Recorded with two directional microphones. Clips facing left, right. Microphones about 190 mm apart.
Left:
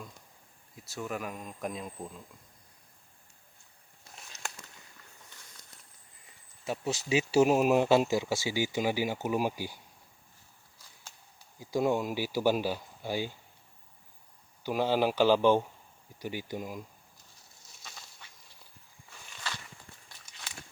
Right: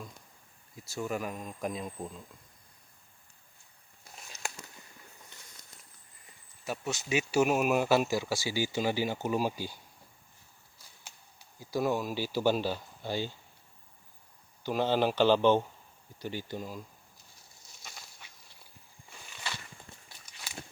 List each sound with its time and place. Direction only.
0.8 s speech: centre (ahead or behind)
4.3 s a sound: 20° left (ahead or behind)
6.7 s speech: 30° left (ahead or behind)
11.6 s speech: 20° left (ahead or behind)
14.6 s speech: 10° left (ahead or behind)
17.8 s a sound: 10° right (ahead or behind)